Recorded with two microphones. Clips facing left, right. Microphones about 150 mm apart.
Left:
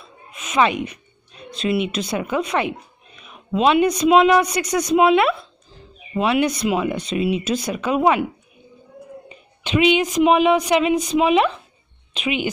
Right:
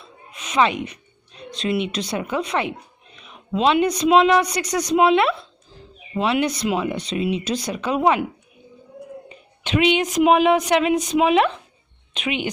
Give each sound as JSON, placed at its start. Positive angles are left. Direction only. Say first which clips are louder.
{"t": 0.3, "sound": "a sound", "louder": "left 1 dB", "side_deg": 5}
{"t": 1.5, "sound": "a woman's voice", "louder": "left 2 dB", "side_deg": 5}
{"t": 9.6, "sound": "a woman's voice", "louder": "left 2 dB", "side_deg": 0}